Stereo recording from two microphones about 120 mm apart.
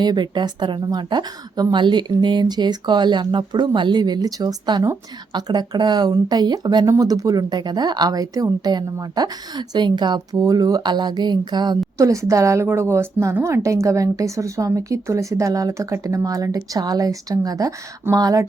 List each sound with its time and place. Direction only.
0.0 s a woman's voice: 35° right (ahead or behind)
11.9 s a woman's voice: 25° right (ahead or behind)